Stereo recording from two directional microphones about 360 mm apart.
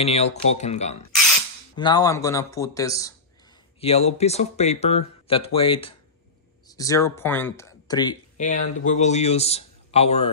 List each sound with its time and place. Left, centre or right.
0.0 s speech: centre